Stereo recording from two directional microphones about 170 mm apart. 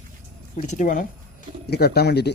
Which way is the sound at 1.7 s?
70° left (ahead or behind).